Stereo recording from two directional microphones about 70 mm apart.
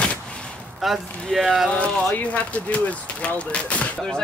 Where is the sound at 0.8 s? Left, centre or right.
Centre.